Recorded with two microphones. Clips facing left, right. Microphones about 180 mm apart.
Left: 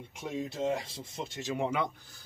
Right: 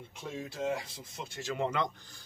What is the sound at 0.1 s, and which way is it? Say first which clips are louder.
Speech: left 5 dB; 20° left (ahead or behind).